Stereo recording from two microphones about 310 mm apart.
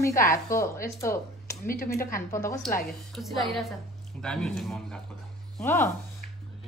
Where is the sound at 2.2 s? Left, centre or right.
Centre.